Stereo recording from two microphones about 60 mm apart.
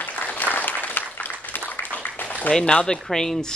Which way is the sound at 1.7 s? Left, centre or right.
Left.